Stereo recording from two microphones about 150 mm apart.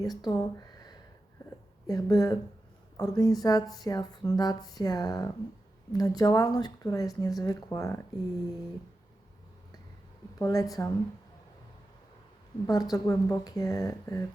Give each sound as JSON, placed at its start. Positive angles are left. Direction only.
{"t": 0.0, "sound": "speech", "side_deg": 25}
{"t": 10.3, "sound": "speech", "side_deg": 25}
{"t": 12.6, "sound": "speech", "side_deg": 25}